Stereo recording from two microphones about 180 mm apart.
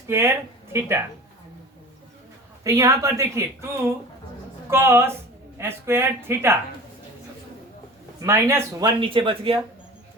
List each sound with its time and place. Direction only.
0.1 s speech: 15° right (ahead or behind)
2.6 s speech: 15° right (ahead or behind)
8.2 s speech: 15° right (ahead or behind)
9.0 s speech: 30° right (ahead or behind)